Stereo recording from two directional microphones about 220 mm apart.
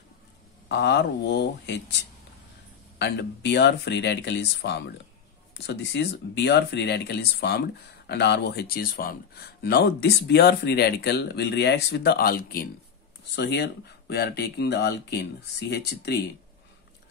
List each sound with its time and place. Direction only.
0.7 s speech: 50° left (ahead or behind)
3.0 s speech: 50° left (ahead or behind)